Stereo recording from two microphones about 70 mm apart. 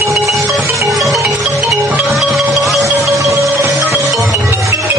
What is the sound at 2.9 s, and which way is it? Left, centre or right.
Music, right.